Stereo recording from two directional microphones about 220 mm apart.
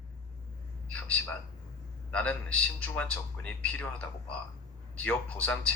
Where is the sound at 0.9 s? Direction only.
5° left (ahead or behind).